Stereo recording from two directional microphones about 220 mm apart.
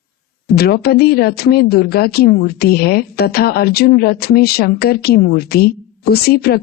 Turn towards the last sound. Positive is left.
turn(degrees=45)  # may be behind; listen again after turning